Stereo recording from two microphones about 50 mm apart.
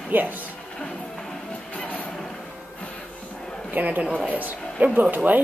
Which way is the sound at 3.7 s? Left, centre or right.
Right.